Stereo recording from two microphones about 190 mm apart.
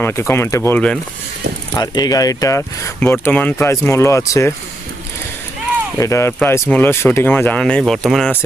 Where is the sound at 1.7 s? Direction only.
20° left (ahead or behind).